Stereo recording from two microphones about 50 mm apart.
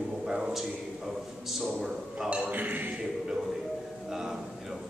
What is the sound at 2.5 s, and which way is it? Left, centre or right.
Speech, right.